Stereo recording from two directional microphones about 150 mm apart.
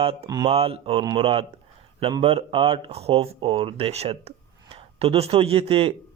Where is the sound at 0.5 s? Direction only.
40° right (ahead or behind).